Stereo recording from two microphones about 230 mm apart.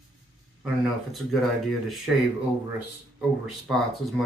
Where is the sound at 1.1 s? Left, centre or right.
Centre.